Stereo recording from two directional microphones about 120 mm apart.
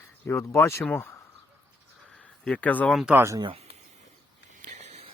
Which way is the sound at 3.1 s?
20° right (ahead or behind).